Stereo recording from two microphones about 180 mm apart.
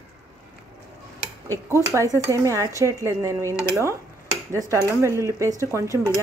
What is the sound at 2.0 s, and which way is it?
Speech, 15° right (ahead or behind).